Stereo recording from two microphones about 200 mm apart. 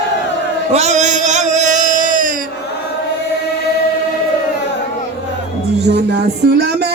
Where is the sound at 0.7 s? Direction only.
35° right (ahead or behind).